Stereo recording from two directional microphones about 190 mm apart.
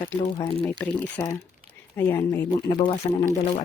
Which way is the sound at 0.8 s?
10° left (ahead or behind).